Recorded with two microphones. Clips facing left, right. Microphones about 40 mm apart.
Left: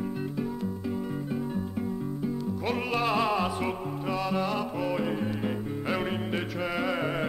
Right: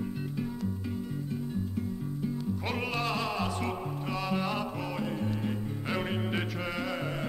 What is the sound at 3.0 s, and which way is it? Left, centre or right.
Music, centre.